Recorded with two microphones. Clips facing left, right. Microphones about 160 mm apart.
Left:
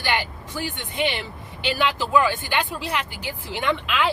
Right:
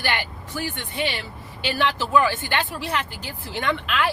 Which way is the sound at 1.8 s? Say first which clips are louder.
Even; 10° left (ahead or behind).